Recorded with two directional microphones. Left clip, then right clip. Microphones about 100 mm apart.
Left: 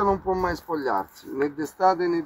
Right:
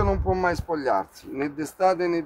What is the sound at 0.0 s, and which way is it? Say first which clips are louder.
Speech: even; 40° right (ahead or behind).